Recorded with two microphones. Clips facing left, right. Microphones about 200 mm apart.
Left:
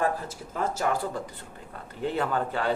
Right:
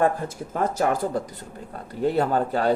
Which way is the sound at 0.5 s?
50° right (ahead or behind).